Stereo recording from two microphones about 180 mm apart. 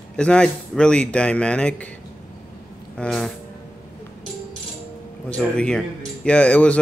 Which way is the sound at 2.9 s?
5° left (ahead or behind).